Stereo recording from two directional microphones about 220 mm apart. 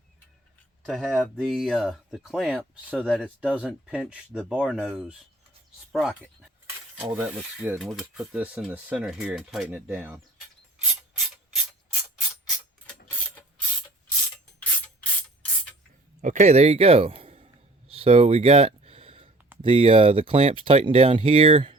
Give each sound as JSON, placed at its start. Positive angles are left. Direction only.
{"t": 0.9, "sound": "speech", "side_deg": 0}
{"t": 16.2, "sound": "a sound", "side_deg": -35}
{"t": 19.6, "sound": "speech", "side_deg": -25}